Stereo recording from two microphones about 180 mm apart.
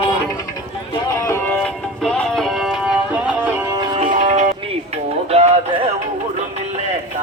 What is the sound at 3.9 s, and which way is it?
Music, 40° right (ahead or behind).